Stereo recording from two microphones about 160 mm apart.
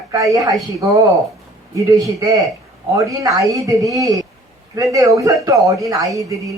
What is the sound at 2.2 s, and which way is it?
Speech, 20° right (ahead or behind).